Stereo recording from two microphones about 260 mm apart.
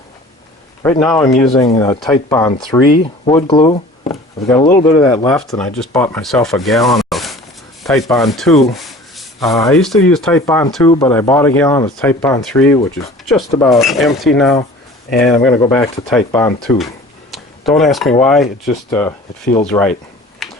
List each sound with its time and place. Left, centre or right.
0.8 s speech: centre
1.5 s speech: centre
4.9 s speech: centre
10.7 s speech: centre
17.3 s a sound: centre
18.2 s speech: centre
20.4 s a sound: centre